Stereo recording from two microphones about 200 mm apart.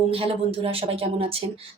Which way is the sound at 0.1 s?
30° right (ahead or behind).